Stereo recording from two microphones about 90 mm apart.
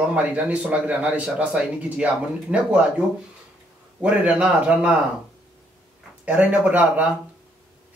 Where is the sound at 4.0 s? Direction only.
15° right (ahead or behind).